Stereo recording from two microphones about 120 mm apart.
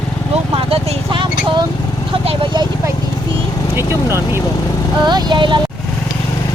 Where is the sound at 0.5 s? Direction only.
50° right (ahead or behind).